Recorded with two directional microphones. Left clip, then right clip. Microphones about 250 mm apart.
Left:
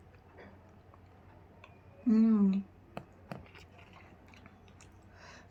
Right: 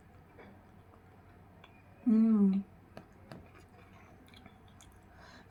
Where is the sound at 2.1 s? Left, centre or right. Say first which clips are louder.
Even; centre.